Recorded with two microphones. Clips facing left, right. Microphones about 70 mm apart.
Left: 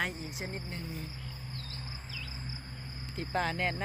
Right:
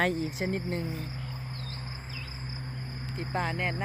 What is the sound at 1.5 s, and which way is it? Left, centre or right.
Insect, right.